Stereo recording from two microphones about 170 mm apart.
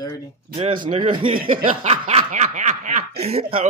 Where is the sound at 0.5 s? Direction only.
30° right (ahead or behind).